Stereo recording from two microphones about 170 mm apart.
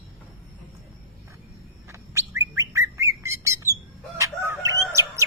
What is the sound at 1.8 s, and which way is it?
Bird, 15° right (ahead or behind).